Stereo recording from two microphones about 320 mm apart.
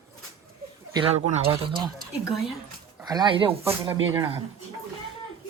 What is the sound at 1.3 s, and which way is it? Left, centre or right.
Speech, centre.